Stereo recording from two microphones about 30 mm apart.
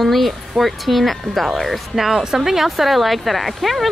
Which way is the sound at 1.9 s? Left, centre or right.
Centre.